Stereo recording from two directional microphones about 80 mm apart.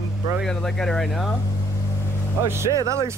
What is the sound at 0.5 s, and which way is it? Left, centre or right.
Speech, centre.